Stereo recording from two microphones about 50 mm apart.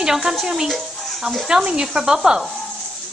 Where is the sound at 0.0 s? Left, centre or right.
Centre.